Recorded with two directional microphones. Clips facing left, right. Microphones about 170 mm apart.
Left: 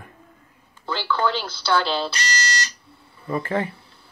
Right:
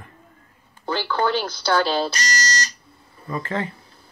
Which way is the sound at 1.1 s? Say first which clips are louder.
Even; 50° right (ahead or behind).